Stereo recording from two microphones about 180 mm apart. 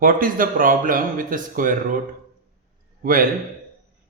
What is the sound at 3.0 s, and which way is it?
Speech, 50° right (ahead or behind).